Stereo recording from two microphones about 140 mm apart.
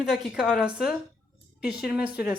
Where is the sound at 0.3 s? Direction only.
5° right (ahead or behind).